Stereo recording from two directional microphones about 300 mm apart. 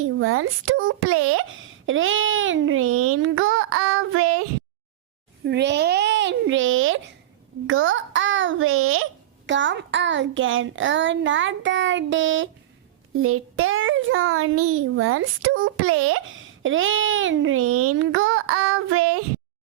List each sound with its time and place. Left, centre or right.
0.0 s a child's voice: right
5.5 s a child's voice: right